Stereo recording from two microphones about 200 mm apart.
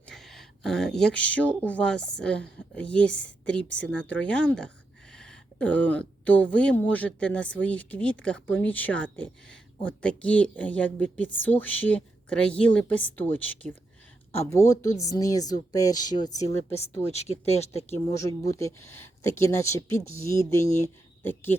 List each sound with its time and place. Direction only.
0.1 s speech: centre (ahead or behind); by 16.6 s 15° left (ahead or behind)
16.7 s speech: 30° left (ahead or behind)
17.9 s speech: 15° left (ahead or behind)